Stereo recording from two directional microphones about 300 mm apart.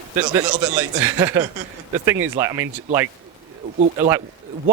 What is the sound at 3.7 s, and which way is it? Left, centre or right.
Speech, right.